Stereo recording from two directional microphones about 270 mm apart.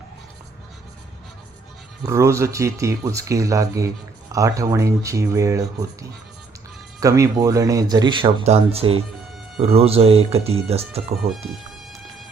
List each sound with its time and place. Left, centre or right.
2.0 s speech: centre